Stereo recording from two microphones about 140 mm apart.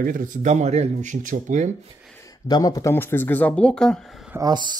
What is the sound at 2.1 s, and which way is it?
Speech, 25° left (ahead or behind).